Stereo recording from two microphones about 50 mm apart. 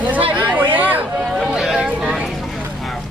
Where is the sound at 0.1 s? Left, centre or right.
Right.